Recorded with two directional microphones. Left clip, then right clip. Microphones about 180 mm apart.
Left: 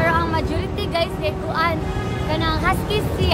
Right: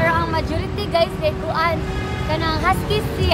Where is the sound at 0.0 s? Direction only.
25° left (ahead or behind).